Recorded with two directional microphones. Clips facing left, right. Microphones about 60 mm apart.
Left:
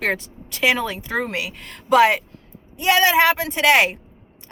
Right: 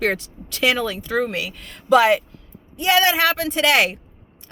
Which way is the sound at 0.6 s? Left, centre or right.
Left.